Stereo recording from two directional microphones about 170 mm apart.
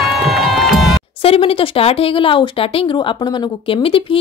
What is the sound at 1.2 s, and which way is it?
Speech, 35° left (ahead or behind).